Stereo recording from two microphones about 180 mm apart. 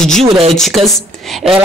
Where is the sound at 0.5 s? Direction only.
Centre (ahead or behind).